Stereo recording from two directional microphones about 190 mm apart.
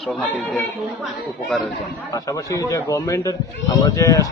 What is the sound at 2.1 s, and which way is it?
A man's voice, 20° left (ahead or behind).